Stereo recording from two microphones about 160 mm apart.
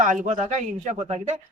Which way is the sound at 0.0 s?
50° right (ahead or behind).